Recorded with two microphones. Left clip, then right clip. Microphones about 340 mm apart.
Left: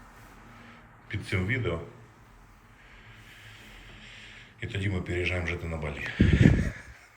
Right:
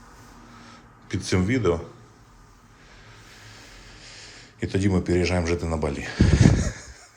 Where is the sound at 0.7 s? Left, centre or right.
Centre.